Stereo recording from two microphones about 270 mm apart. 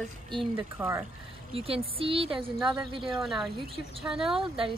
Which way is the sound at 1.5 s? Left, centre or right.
Right.